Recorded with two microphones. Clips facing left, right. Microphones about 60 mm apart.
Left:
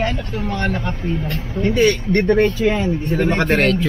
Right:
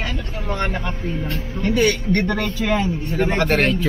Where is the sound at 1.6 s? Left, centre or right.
Centre.